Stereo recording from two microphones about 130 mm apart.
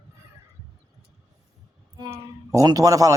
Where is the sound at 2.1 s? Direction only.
25° right (ahead or behind).